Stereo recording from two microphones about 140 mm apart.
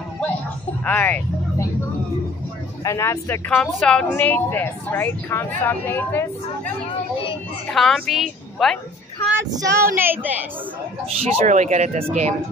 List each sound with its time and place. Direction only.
0.8 s a woman's voice: 10° left (ahead or behind)
2.8 s speech: 20° left (ahead or behind)
3.4 s a woman's voice: 5° left (ahead or behind)
6.9 s a sound: 40° left (ahead or behind)
7.7 s a woman's voice: centre (ahead or behind)
9.4 s child singing: 20° right (ahead or behind)
9.9 s a woman's voice: 15° right (ahead or behind)
11.2 s speech: 55° right (ahead or behind)